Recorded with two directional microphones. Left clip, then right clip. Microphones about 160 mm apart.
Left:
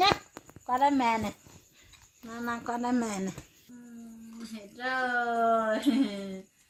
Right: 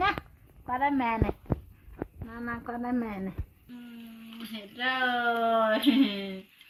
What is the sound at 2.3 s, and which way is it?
Speech, 85° left.